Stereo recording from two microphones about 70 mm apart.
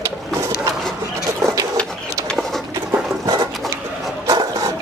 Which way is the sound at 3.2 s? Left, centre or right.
Right.